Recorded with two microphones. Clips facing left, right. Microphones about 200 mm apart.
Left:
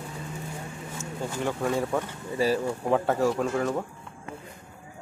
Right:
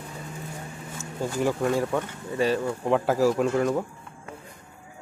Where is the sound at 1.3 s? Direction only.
5° right (ahead or behind).